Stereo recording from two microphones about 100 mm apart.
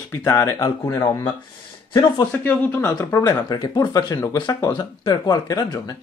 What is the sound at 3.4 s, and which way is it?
Speech, 45° left (ahead or behind).